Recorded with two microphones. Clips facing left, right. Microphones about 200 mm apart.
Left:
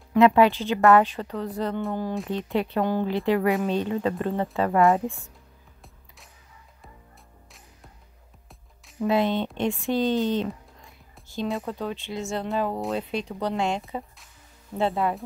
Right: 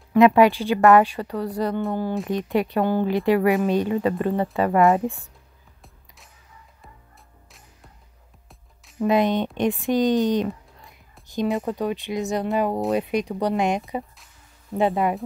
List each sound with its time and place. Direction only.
0.1 s speech: 15° right (ahead or behind)
2.5 s speech: 10° right (ahead or behind)
5.0 s speech: 35° right (ahead or behind)
9.0 s speech: 15° right (ahead or behind)
11.6 s speech: 15° right (ahead or behind)